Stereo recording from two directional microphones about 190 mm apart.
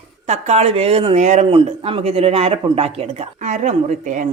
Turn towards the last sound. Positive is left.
turn(degrees=-40)  # may be behind; listen again after turning